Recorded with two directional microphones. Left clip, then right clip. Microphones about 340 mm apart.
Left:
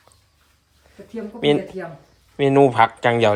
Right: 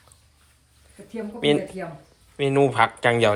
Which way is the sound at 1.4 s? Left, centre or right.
Centre.